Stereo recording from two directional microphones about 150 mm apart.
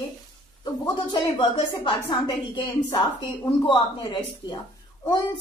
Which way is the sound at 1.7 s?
30° left (ahead or behind).